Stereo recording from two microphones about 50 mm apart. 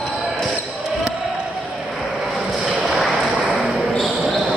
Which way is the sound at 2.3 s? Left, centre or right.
Centre.